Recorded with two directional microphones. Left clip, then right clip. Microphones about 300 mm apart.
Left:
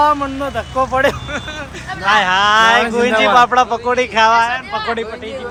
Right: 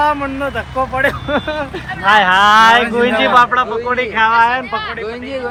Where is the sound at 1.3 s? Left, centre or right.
Centre.